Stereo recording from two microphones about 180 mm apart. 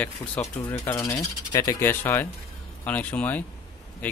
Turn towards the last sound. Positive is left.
turn(degrees=10)  # may be behind; listen again after turning